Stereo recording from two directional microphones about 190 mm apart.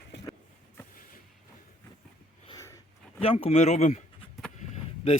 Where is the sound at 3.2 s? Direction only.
30° left (ahead or behind).